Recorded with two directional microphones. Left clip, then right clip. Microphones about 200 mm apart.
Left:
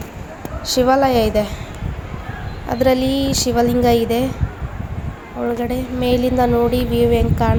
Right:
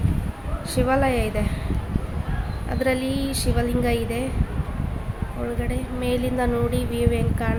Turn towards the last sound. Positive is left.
turn(degrees=15)  # may be behind; listen again after turning